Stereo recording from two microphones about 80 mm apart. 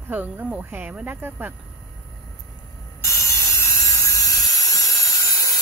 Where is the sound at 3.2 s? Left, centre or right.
Left.